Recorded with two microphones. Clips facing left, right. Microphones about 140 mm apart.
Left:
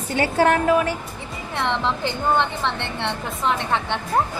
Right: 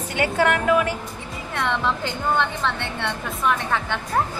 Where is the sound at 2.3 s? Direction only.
20° left (ahead or behind).